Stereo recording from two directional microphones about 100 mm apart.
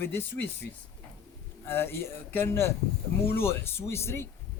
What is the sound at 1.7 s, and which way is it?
A man's voice, 25° left (ahead or behind).